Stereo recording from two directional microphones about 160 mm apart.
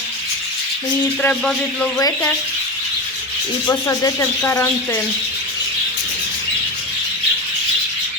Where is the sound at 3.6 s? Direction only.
20° left (ahead or behind).